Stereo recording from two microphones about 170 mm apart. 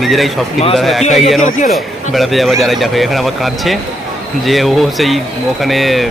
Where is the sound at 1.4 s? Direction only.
50° left (ahead or behind).